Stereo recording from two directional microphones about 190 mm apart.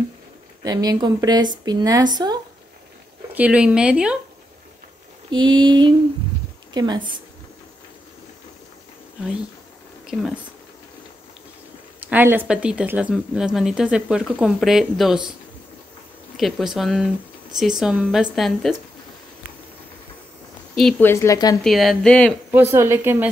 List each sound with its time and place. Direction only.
0.7 s speech: 20° right (ahead or behind)
3.3 s speech: 5° right (ahead or behind)
5.3 s a woman's voice: 25° right (ahead or behind)
10.0 s speech: centre (ahead or behind)
12.1 s speech: 10° right (ahead or behind)
16.3 s speech: centre (ahead or behind)
20.7 s speech: centre (ahead or behind)
21.1 s speech: 15° left (ahead or behind)
21.6 s speech: centre (ahead or behind)
22.5 s a woman's voice: 10° right (ahead or behind)